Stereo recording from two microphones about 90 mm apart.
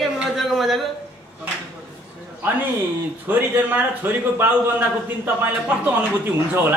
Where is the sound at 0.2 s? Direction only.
Centre (ahead or behind).